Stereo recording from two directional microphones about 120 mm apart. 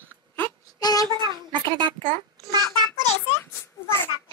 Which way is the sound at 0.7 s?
30° left (ahead or behind).